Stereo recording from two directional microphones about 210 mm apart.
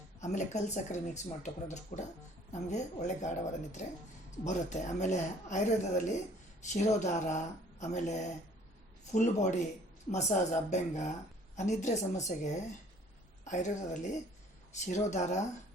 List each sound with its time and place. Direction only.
0.2 s a woman's voice: 35° left (ahead or behind)